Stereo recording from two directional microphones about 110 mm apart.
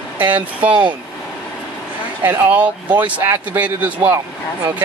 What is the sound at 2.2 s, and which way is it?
Speech, 20° right (ahead or behind).